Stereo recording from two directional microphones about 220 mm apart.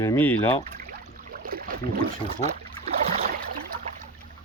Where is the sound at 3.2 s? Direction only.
40° right (ahead or behind).